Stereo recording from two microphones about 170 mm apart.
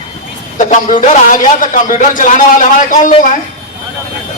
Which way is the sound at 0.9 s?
50° left (ahead or behind).